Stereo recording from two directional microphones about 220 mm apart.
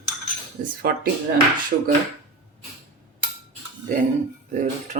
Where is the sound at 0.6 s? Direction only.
40° right (ahead or behind).